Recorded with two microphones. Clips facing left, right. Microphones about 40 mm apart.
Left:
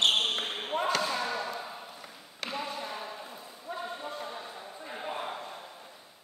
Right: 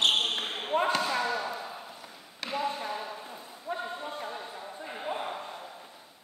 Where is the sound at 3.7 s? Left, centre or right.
Right.